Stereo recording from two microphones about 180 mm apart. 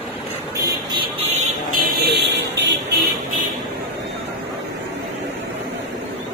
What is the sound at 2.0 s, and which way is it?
Vehicle, 70° right (ahead or behind).